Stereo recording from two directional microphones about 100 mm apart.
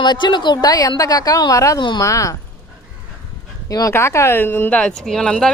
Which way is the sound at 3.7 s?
35° left (ahead or behind).